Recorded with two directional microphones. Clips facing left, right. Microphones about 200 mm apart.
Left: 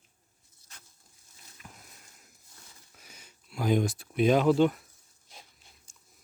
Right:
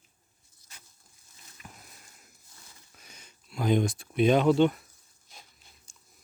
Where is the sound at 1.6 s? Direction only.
5° right (ahead or behind).